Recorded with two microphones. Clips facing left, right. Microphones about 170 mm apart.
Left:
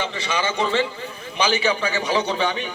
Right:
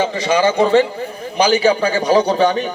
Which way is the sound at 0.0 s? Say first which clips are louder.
Right 10 dB; 40° right (ahead or behind).